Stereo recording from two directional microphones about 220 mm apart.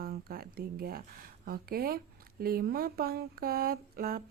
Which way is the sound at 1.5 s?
45° right (ahead or behind).